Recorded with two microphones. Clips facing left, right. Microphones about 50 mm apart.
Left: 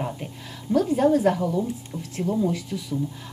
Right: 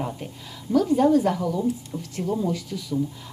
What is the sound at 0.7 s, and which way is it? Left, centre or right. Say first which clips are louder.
Speech: right 1 dB; left.